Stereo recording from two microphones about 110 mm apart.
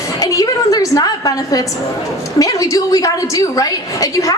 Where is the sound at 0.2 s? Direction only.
35° left (ahead or behind).